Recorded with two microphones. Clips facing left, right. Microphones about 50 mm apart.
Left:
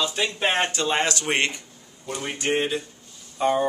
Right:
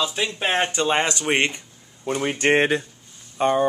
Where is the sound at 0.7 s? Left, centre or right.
Centre.